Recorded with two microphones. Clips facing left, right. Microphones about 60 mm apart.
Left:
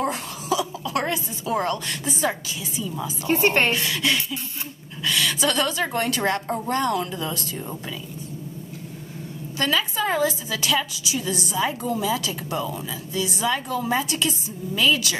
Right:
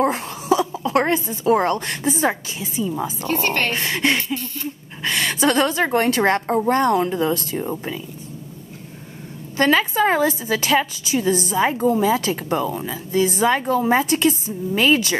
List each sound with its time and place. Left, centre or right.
0.0 s a woman's voice: right
3.3 s a woman's voice: centre
3.7 s a woman's voice: right
9.6 s a woman's voice: right